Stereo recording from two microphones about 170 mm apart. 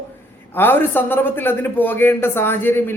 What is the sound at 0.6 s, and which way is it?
A man's voice, 10° left (ahead or behind).